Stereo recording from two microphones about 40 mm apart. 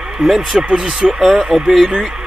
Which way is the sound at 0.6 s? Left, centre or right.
Right.